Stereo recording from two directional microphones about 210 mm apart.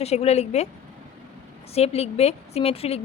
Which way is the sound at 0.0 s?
30° left (ahead or behind).